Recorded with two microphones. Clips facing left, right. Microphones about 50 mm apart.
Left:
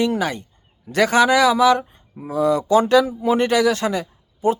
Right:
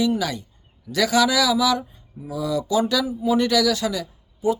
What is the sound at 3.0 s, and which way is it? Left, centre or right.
Speech, left.